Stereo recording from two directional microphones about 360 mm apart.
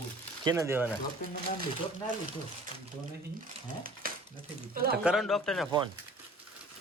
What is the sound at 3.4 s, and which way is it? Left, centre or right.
Crumpling, right.